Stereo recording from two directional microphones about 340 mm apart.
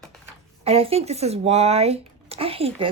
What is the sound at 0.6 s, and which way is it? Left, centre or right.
Speech, centre.